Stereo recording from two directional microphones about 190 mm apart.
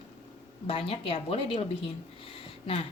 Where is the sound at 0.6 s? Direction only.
30° left (ahead or behind).